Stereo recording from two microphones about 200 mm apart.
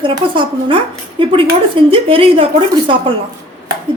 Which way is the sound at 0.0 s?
25° right (ahead or behind).